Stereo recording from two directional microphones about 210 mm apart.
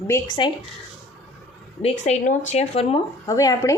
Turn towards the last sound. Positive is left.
turn(degrees=15)  # may be behind; listen again after turning